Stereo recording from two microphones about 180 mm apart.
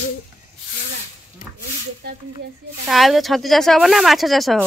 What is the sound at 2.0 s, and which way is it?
Speech, 60° right (ahead or behind).